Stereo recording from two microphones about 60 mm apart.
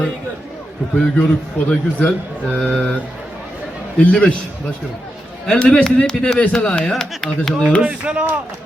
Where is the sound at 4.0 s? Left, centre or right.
Centre.